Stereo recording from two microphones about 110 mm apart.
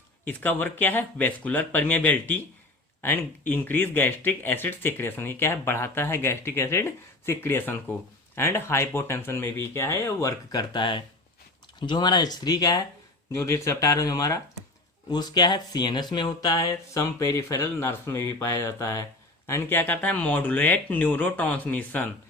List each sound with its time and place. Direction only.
0.3 s speech: 15° left (ahead or behind); by 12.8 s 35° left (ahead or behind)
13.3 s speech: 25° left (ahead or behind)